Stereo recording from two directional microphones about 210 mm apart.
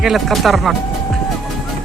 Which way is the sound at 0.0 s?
Centre (ahead or behind).